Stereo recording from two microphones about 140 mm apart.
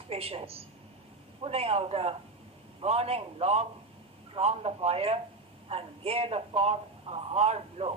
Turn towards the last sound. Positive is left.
turn(degrees=-45)  # may be behind; listen again after turning